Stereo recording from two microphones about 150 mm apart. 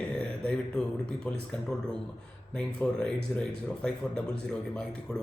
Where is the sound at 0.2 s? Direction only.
5° left (ahead or behind).